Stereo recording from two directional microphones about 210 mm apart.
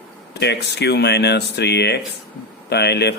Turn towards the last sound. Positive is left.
turn(degrees=50)  # may be behind; listen again after turning